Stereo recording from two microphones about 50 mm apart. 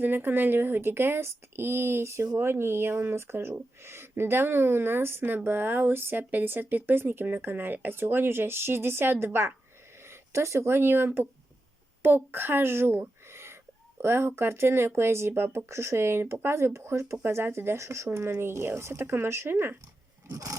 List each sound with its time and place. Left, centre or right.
0.0 s speech: right
17.2 s speech: right
20.3 s a sound: right